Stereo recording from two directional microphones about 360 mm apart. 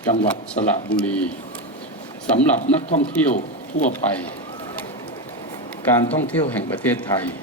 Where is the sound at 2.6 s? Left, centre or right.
Centre.